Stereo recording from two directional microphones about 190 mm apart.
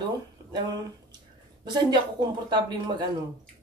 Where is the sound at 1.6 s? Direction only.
25° right (ahead or behind).